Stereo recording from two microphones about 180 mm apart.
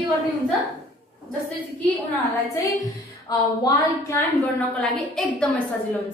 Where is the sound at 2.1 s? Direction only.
15° left (ahead or behind).